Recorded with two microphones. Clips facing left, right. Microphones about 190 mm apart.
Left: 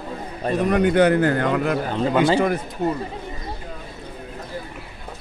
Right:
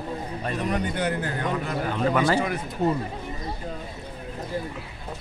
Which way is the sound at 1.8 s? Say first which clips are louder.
Left 1 dB; 25° left (ahead or behind).